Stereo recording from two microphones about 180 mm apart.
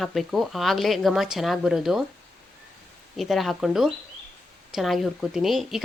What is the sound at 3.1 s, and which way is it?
Speech, centre (ahead or behind).